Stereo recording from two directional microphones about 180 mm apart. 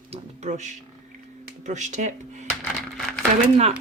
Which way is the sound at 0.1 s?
40° right (ahead or behind).